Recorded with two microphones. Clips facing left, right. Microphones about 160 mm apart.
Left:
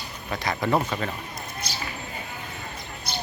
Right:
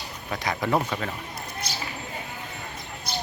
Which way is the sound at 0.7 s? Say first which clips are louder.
Left 1 dB; centre (ahead or behind).